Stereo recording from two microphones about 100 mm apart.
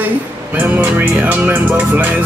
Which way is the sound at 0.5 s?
20° right (ahead or behind).